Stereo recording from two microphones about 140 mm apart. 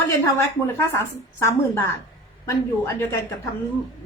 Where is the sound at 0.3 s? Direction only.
20° left (ahead or behind).